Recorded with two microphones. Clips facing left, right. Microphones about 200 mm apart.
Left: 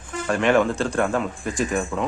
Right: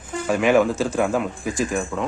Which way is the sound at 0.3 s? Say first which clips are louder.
Right 2 dB; 5° right (ahead or behind).